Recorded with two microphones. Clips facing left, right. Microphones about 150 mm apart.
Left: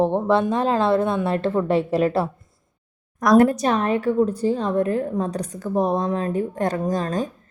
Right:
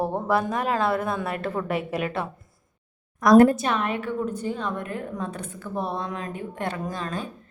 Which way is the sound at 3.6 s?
35° left (ahead or behind).